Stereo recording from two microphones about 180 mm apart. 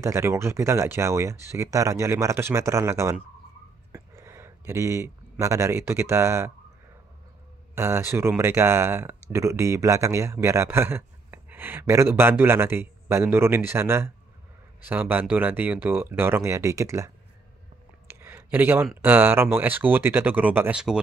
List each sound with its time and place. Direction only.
0.0 s speech: 15° right (ahead or behind)
7.7 s speech: 15° right (ahead or behind)
18.0 s a sound: 10° right (ahead or behind)
18.9 s speech: 10° right (ahead or behind)